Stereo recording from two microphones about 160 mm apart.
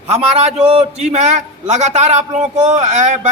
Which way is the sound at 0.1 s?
40° right (ahead or behind).